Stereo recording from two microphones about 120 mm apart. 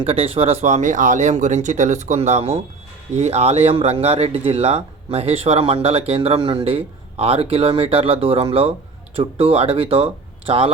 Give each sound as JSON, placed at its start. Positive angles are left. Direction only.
{"t": 0.0, "sound": "speech", "side_deg": -50}